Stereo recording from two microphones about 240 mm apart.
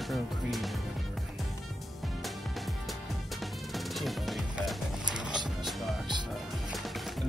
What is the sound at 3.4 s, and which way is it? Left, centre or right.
Music, centre.